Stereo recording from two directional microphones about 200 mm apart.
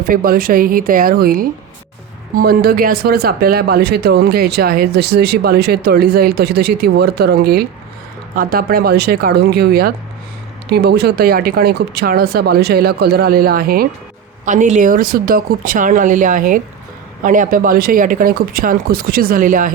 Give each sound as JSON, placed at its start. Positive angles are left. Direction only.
{"t": 0.1, "sound": "speech", "side_deg": -45}